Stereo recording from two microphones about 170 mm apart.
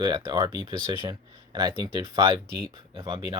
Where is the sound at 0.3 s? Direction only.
25° right (ahead or behind).